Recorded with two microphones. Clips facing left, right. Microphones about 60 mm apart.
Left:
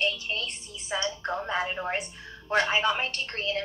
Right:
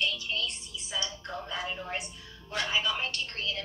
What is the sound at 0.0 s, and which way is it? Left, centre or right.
Telephone, left.